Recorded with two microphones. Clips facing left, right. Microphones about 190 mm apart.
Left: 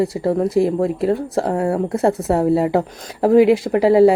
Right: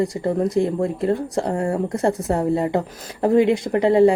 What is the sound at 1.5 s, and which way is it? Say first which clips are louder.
Speech: left 3 dB; 60° left (ahead or behind).